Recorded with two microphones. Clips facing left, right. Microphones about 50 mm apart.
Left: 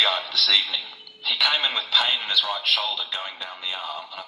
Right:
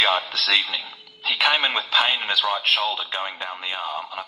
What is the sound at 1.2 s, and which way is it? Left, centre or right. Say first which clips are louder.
A woman's voice: right 3 dB; right.